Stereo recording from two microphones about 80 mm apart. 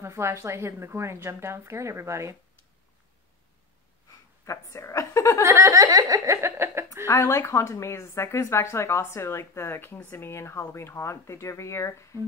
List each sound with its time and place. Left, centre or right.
0.0 s a woman's voice: right
4.5 s speech: left
5.5 s speech: right
7.1 s speech: left